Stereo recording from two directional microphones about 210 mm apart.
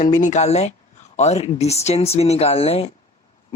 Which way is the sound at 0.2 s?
35° left (ahead or behind).